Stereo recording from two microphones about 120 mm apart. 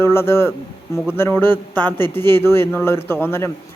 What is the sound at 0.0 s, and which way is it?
Speech, 20° left (ahead or behind).